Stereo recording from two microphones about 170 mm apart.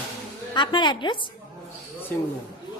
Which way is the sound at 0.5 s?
25° left (ahead or behind).